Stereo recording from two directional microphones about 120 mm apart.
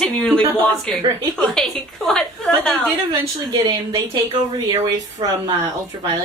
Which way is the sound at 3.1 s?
35° right (ahead or behind).